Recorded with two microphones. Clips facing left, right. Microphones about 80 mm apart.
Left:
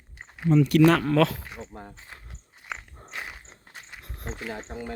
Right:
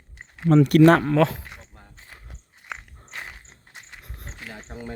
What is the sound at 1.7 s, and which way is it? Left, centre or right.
Walk, left.